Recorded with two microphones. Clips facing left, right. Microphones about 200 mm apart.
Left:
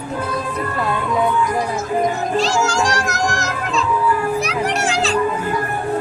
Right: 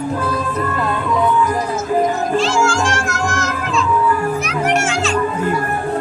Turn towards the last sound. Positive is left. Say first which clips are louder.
# right 2 dB
turn(degrees=35)  # may be behind; listen again after turning